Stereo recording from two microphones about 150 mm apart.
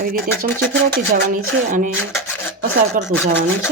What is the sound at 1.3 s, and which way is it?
Speech, 65° right (ahead or behind).